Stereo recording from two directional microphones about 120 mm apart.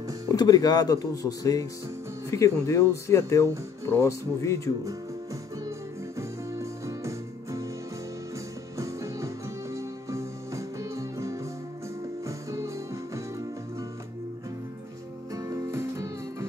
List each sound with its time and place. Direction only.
0.3 s speech: 30° left (ahead or behind)
6.1 s music: 25° right (ahead or behind)
8.7 s music: 25° right (ahead or behind)
15.3 s music: 25° right (ahead or behind)